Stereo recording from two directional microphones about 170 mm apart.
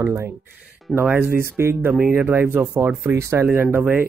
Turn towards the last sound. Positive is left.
turn(degrees=-10)  # may be behind; listen again after turning